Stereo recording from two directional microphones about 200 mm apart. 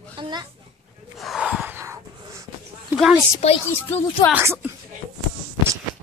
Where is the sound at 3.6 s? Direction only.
10° left (ahead or behind).